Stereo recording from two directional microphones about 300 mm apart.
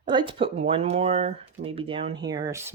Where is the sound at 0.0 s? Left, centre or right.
Centre.